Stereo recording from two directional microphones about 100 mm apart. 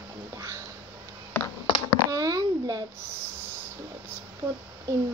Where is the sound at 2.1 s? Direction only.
35° right (ahead or behind).